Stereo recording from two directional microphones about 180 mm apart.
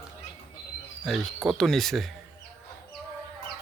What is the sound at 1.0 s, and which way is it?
A man's voice, centre (ahead or behind).